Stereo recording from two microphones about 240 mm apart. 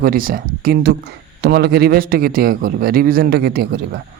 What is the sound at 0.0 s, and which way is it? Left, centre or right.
A man's voice, right.